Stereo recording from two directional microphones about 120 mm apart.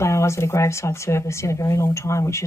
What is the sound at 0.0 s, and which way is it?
Speech, 25° left (ahead or behind).